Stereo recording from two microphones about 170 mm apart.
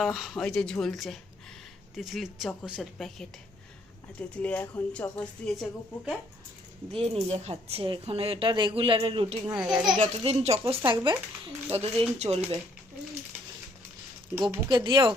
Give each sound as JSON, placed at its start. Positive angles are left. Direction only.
{"t": 0.0, "sound": "speech", "side_deg": 0}
{"t": 6.9, "sound": "speech", "side_deg": -35}
{"t": 9.6, "sound": "speech", "side_deg": -5}
{"t": 10.0, "sound": "speech", "side_deg": -40}
{"t": 14.5, "sound": "speech", "side_deg": -25}